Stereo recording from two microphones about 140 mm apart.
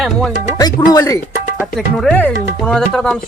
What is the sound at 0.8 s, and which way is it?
Speech, 25° left (ahead or behind).